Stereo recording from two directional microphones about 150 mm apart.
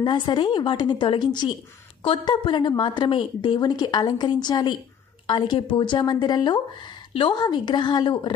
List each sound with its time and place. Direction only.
0.0 s a woman's voice: 30° left (ahead or behind)